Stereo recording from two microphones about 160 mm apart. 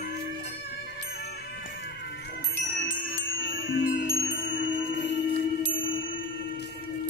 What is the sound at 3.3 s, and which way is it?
Chime, 90° left.